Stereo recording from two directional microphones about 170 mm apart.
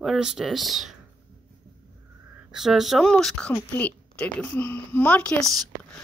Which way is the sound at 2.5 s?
Centre (ahead or behind).